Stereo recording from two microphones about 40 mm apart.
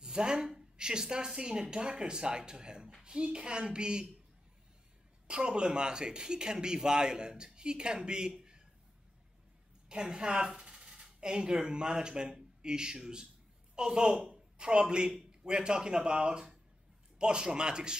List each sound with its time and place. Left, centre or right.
0.0 s speech: centre
5.3 s speech: right
9.8 s speech: right
10.6 s a sound: right
10.9 s a man's voice: right